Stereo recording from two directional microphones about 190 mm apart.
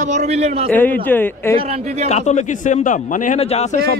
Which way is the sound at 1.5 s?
35° right (ahead or behind).